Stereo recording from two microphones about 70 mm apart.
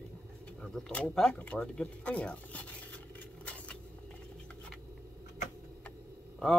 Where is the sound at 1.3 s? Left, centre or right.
Centre.